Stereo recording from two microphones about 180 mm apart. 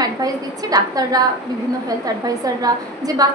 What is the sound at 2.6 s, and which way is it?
Speech, 20° right (ahead or behind).